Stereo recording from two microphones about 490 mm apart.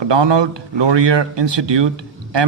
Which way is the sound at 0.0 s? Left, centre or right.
Right.